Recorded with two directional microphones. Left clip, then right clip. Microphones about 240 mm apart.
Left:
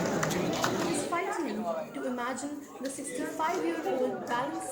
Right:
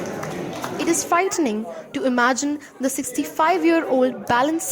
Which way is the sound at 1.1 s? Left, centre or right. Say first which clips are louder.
Right 12 dB; right.